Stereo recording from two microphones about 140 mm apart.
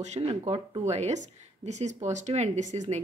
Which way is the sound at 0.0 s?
50° right (ahead or behind).